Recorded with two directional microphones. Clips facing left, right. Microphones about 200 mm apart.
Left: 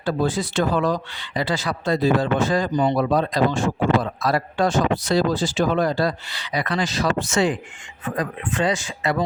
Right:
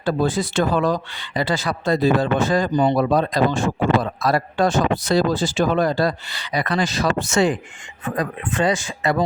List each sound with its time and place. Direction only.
0.0 s speech: 50° right (ahead or behind)
2.7 s speech: 40° right (ahead or behind)